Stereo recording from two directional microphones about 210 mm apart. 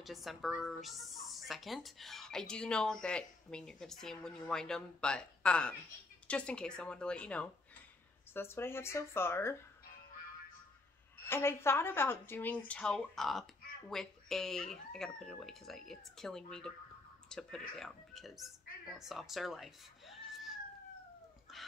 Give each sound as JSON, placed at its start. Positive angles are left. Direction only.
{"t": 0.0, "sound": "a woman's voice", "side_deg": 0}
{"t": 11.2, "sound": "a woman's voice", "side_deg": 10}
{"t": 21.5, "sound": "a sound", "side_deg": 0}